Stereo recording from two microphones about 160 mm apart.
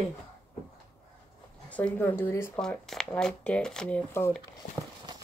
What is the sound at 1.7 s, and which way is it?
Speech, 10° left (ahead or behind).